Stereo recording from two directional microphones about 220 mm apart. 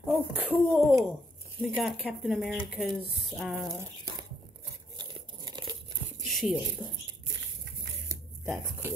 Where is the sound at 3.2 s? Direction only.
Centre (ahead or behind).